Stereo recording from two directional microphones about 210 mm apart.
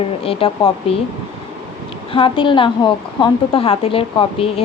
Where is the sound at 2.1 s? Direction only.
25° left (ahead or behind).